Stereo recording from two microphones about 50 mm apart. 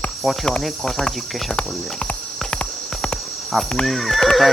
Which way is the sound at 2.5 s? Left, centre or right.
Centre.